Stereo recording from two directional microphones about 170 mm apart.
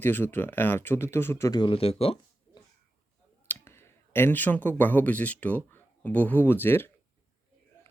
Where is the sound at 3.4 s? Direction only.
15° left (ahead or behind).